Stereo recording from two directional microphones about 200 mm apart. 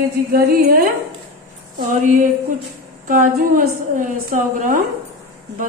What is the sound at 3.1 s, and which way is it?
A woman's voice, 40° right (ahead or behind).